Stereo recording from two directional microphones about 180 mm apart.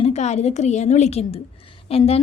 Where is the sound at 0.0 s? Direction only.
40° left (ahead or behind).